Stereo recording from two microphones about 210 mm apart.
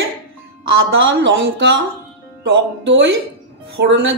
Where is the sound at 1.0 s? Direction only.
60° right (ahead or behind).